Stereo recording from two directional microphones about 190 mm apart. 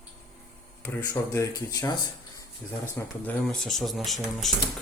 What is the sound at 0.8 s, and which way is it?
Speech, 15° left (ahead or behind).